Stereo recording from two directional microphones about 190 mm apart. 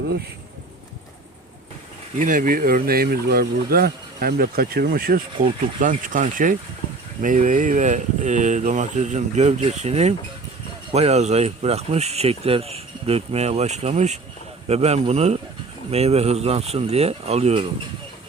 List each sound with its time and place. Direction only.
2.1 s speech: 45° right (ahead or behind)